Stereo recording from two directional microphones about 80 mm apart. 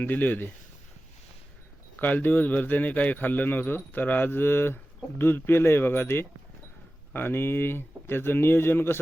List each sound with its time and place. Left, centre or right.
0.0 s speech: left
2.0 s speech: left